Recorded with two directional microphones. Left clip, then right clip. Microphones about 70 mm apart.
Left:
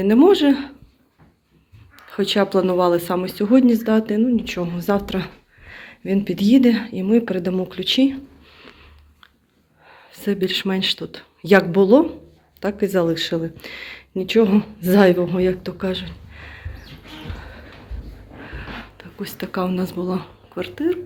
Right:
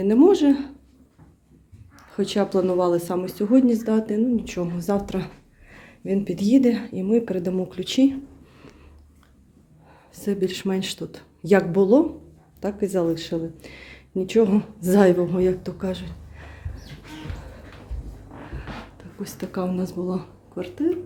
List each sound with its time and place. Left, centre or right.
0.0 s speech: centre
2.0 s speech: centre; by 8.2 s right
9.8 s a sound: right
10.8 s speech: right
11.4 s a woman's voice: centre
13.1 s speech: left
13.6 s speech: centre
14.2 s a woman's voice: right
16.3 s a sound: centre
18.5 s speech: centre